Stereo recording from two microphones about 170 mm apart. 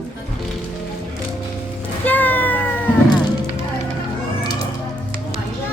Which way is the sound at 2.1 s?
10° left (ahead or behind).